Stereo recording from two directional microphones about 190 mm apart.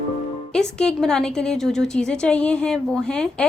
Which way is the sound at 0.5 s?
5° left (ahead or behind).